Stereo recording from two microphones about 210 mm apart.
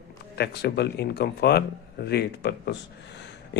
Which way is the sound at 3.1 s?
55° left (ahead or behind).